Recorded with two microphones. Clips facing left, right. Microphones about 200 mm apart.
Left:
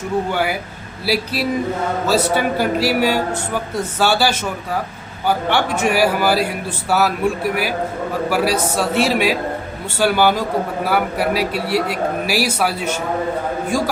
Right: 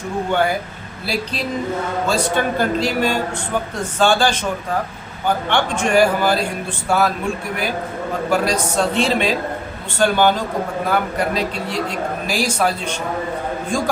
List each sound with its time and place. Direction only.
1.0 s a man's voice: 10° left (ahead or behind)
5.5 s a man's voice: 5° left (ahead or behind)
8.3 s a man's voice: 5° left (ahead or behind)